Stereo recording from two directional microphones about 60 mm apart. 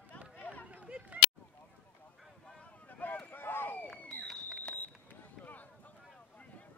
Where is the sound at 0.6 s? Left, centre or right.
Right.